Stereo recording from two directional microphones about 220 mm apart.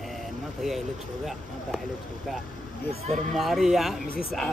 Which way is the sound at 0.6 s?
Centre (ahead or behind).